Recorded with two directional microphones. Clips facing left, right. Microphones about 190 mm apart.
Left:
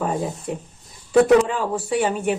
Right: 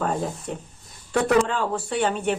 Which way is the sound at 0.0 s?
5° left (ahead or behind).